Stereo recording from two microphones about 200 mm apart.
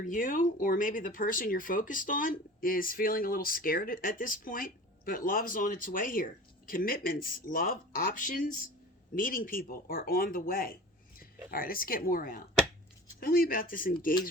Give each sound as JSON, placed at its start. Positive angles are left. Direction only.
{"t": 0.0, "sound": "speech", "side_deg": 40}